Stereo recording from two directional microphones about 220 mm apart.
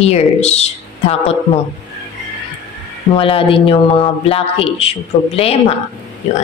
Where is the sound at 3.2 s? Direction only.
25° left (ahead or behind).